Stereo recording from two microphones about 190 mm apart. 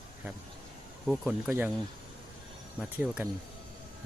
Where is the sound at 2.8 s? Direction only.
5° right (ahead or behind).